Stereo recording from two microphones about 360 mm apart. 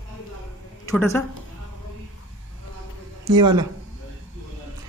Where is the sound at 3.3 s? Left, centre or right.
Centre.